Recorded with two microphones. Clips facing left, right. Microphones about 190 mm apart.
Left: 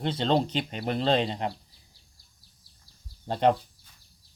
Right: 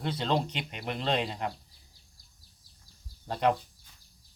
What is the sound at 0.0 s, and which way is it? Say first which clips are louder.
Speech: left 4 dB; 25° left (ahead or behind).